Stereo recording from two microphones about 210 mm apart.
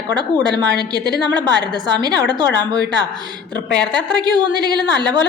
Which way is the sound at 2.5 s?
55° right (ahead or behind).